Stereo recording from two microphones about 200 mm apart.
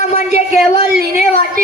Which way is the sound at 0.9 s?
50° right (ahead or behind).